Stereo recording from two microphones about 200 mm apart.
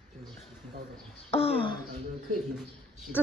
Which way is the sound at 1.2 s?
30° left (ahead or behind).